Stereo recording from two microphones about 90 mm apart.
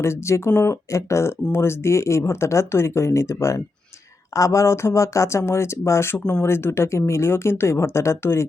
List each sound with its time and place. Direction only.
0.0 s speech: 30° left (ahead or behind)